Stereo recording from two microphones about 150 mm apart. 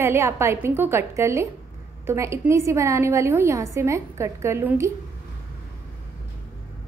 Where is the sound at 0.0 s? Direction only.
15° right (ahead or behind).